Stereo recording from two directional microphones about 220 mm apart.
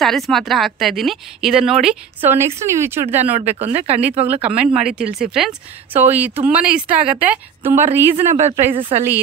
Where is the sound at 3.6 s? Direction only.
30° right (ahead or behind).